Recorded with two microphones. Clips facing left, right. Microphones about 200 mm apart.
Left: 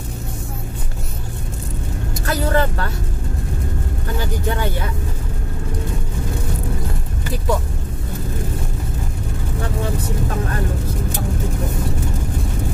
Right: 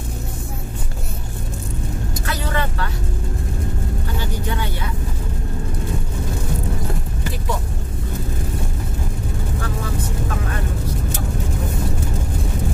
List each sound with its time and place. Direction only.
2.2 s vehicle: 45° left (ahead or behind)